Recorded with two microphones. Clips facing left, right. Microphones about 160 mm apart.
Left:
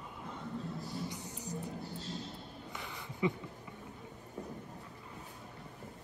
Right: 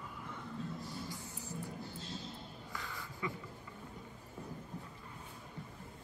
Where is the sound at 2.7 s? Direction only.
20° left (ahead or behind).